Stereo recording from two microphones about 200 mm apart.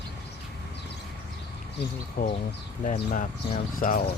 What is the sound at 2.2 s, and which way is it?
Speech, 45° left (ahead or behind).